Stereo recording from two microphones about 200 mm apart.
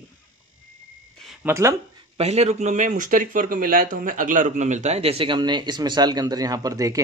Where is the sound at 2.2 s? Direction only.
30° right (ahead or behind); by 7.0 s 15° right (ahead or behind).